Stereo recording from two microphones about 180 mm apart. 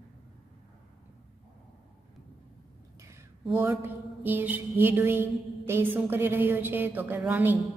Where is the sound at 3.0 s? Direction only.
15° right (ahead or behind).